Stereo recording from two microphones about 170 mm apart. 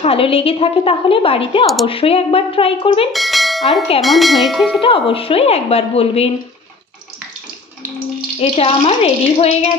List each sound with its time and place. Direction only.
0.0 s a woman's voice: 35° left (ahead or behind)
3.1 s bell: centre (ahead or behind)
4.0 s tubular bells: centre (ahead or behind)
4.8 s a woman's voice: 30° left (ahead or behind)
8.4 s a woman's voice: 35° left (ahead or behind)